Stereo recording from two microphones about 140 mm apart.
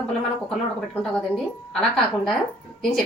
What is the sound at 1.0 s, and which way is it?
A woman's voice, 5° left (ahead or behind).